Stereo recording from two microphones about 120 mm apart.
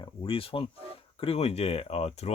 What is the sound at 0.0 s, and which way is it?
Speech, 50° left (ahead or behind).